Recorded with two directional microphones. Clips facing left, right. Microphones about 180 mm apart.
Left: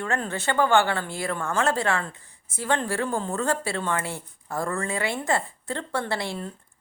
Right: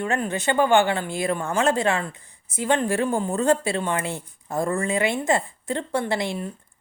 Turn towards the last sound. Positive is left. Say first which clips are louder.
# right 4 dB
turn(degrees=-15)  # may be behind; listen again after turning